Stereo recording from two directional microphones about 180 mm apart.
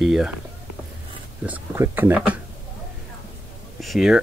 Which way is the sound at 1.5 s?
10° right (ahead or behind).